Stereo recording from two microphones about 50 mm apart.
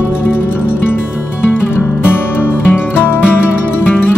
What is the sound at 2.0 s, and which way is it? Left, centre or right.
Music, left.